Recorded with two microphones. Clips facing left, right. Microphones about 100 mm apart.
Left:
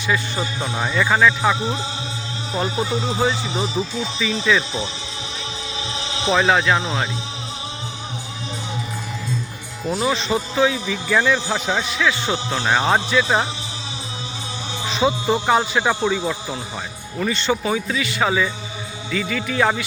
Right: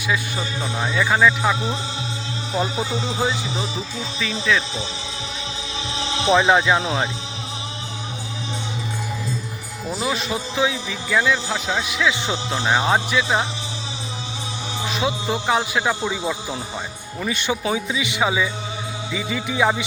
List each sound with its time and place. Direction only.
0.3 s speech: 5° left (ahead or behind)
2.6 s speech: 5° right (ahead or behind)
6.3 s speech: 15° right (ahead or behind)
9.9 s speech: 5° right (ahead or behind)
12.3 s speech: centre (ahead or behind)
14.8 s speech: centre (ahead or behind)
16.1 s speech: 10° right (ahead or behind)